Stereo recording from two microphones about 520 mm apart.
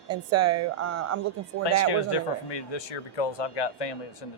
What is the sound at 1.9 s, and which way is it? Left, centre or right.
Speech, left.